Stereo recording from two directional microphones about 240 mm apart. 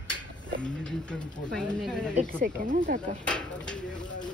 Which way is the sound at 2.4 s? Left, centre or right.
Right.